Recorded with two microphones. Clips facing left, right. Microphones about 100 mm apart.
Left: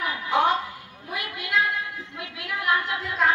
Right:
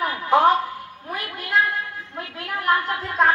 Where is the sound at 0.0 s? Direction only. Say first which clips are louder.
Right 5 dB; 40° right (ahead or behind).